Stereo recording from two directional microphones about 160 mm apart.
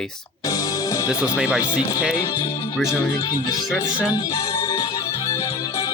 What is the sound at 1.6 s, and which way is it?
Speech, 25° left (ahead or behind).